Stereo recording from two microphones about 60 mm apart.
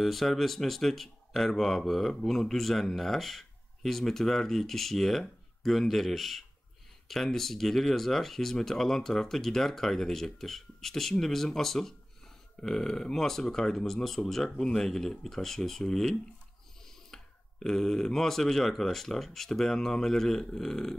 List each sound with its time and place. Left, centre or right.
0.0 s speech: centre